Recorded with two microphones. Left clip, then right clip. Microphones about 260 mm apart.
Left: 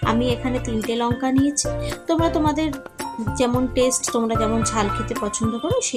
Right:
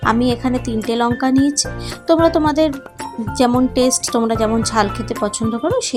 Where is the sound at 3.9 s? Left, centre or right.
Centre.